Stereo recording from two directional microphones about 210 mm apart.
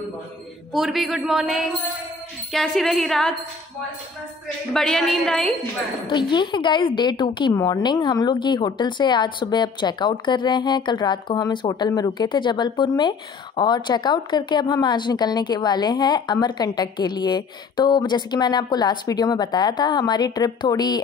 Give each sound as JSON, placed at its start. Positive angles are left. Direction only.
{"t": 0.7, "sound": "speech", "side_deg": 0}
{"t": 4.7, "sound": "speech", "side_deg": 0}
{"t": 6.0, "sound": "a woman's voice", "side_deg": 20}